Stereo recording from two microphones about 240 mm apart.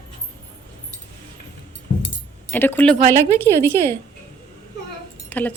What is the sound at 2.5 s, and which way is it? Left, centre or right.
A woman's voice, centre.